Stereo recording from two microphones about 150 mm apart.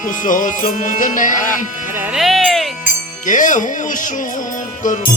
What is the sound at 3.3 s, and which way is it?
Speech, 60° left (ahead or behind).